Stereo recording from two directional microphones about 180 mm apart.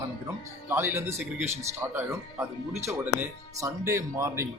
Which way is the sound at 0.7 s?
15° right (ahead or behind).